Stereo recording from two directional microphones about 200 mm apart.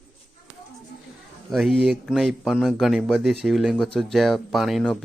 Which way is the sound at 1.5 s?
Centre (ahead or behind).